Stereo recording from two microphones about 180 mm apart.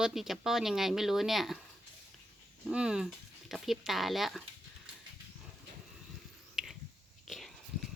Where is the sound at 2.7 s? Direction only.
5° right (ahead or behind).